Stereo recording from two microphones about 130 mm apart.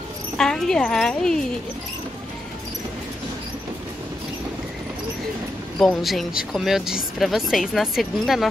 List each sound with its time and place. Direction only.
0.4 s speech: 5° left (ahead or behind)
5.8 s speech: centre (ahead or behind)